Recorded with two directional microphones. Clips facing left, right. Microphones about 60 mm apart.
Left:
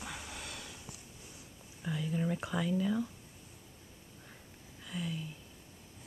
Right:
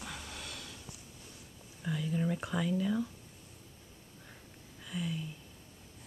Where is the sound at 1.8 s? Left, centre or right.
Centre.